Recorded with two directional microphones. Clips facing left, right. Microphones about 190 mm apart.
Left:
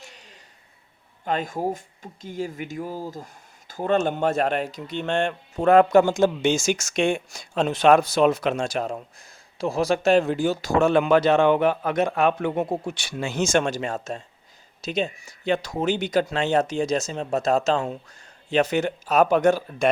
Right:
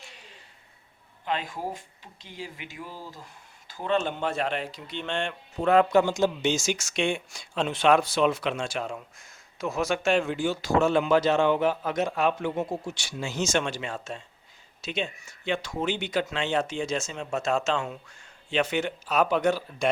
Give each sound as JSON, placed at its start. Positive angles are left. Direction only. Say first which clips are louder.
{"t": 1.2, "sound": "a man's voice", "louder": "left 6 dB", "side_deg": 45}